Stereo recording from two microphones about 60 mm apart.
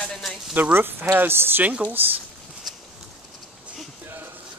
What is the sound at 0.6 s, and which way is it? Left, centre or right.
Speech, right.